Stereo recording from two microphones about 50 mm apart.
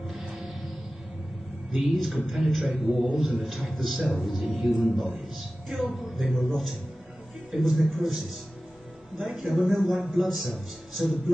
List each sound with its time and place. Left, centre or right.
2.0 s a man's voice: centre
9.2 s a man's voice: centre